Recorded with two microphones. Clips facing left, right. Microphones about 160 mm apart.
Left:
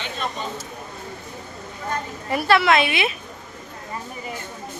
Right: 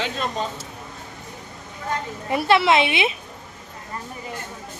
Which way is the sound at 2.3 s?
25° right (ahead or behind).